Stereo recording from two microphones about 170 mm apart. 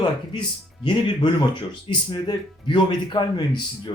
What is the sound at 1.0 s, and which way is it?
Speech, 25° left (ahead or behind).